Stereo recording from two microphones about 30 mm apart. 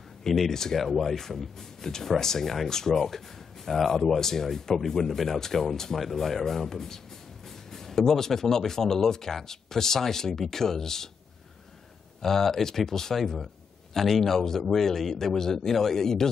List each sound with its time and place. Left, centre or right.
0.5 s speech: centre
12.2 s speech: centre